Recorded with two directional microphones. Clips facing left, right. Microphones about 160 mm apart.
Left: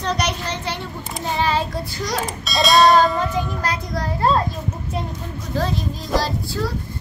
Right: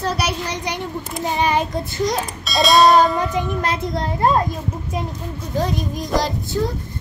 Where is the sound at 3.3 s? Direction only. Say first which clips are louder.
Right 2 dB; 25° right (ahead or behind).